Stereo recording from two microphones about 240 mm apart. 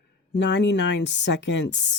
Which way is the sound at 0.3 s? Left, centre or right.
Left.